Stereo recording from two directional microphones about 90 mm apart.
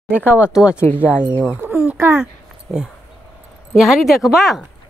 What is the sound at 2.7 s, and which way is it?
Speech, 25° left (ahead or behind).